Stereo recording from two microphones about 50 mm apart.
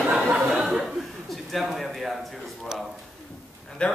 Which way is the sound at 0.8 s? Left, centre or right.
Centre.